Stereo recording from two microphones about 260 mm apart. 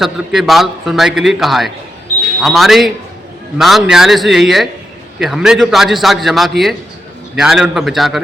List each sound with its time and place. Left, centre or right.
0.0 s a man's voice: centre